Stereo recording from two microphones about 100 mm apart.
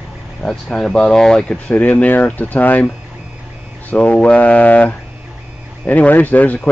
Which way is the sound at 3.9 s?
15° left (ahead or behind).